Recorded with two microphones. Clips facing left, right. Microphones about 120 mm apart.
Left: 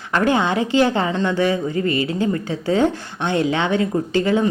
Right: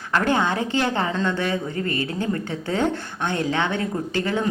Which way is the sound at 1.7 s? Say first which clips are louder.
Left 5 dB; 50° right (ahead or behind).